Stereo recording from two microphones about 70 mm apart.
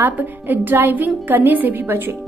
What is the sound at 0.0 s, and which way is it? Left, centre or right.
A woman's voice, right.